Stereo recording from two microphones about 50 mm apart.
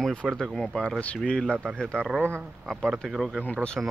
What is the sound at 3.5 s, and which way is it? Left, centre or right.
Speech, centre.